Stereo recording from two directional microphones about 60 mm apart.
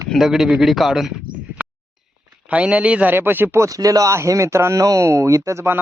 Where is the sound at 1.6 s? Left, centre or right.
Right.